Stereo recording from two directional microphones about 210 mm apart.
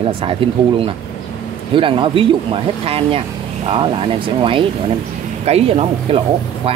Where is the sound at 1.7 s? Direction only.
25° right (ahead or behind).